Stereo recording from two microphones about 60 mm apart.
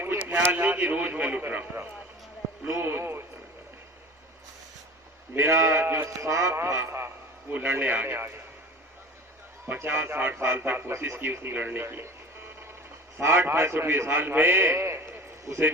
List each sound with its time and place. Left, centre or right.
0.0 s a sound: right
0.5 s a man's voice: right
5.3 s speech: right
7.5 s a man's voice: right
9.8 s a man's voice: right
11.8 s a man's voice: right
13.1 s a man's voice: right
15.5 s speech: right